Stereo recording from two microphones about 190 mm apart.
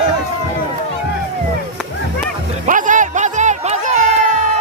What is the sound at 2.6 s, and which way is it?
Music, 45° right (ahead or behind).